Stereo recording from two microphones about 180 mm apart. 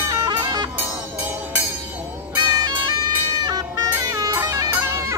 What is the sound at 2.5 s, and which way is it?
Music, 20° right (ahead or behind).